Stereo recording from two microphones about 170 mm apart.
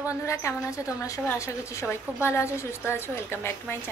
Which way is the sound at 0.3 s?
15° left (ahead or behind).